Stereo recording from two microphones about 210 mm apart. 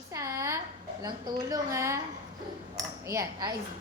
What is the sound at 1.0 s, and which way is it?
Speech, 15° right (ahead or behind).